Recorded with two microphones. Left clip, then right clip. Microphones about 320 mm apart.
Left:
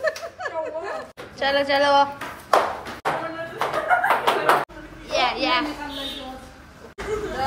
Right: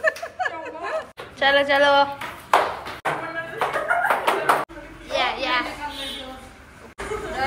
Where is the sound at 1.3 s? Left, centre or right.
Centre.